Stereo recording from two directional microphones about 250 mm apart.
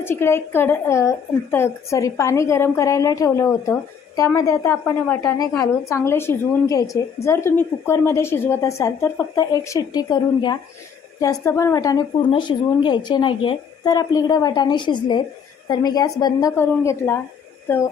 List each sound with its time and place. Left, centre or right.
0.0 s a woman's voice: centre